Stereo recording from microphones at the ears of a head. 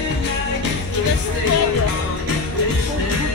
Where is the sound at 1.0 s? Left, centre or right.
Left.